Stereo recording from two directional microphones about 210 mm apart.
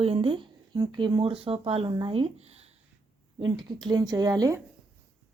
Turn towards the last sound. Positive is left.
turn(degrees=-15)  # may be behind; listen again after turning